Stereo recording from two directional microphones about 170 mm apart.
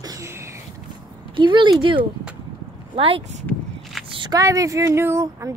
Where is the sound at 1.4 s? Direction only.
30° right (ahead or behind).